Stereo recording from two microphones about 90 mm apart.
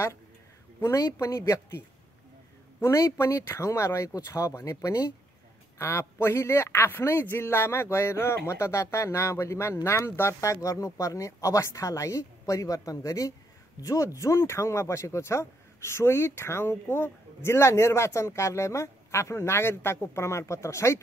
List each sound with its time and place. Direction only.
0.7 s a man's voice: 35° left (ahead or behind)
2.8 s a man's voice: 35° left (ahead or behind)